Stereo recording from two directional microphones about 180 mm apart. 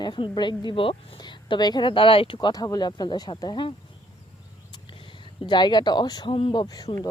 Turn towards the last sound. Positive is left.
turn(degrees=25)  # may be behind; listen again after turning